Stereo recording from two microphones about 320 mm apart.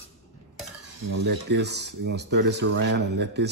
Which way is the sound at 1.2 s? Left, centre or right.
Right.